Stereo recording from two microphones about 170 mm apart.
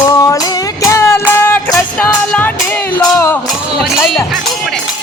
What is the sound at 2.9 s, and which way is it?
Music, 10° left (ahead or behind).